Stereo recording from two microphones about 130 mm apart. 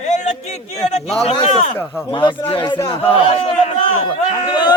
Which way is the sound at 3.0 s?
50° left (ahead or behind).